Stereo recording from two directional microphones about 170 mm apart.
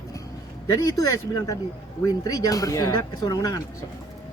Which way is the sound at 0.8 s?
20° left (ahead or behind).